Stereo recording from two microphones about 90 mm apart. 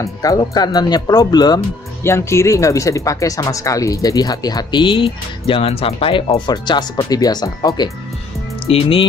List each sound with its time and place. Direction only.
0.0 s speech: 40° left (ahead or behind)
2.0 s speech: 30° left (ahead or behind); by 7.9 s 50° left (ahead or behind)
8.6 s speech: 90° left